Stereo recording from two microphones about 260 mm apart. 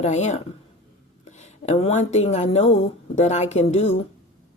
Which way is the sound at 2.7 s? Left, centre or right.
Left.